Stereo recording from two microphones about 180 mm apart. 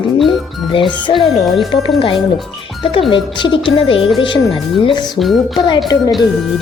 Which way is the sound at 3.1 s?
25° left (ahead or behind).